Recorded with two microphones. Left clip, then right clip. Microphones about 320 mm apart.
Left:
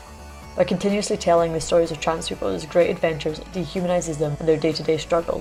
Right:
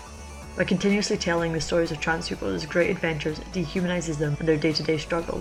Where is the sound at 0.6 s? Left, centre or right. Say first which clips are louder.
Left 3 dB; centre.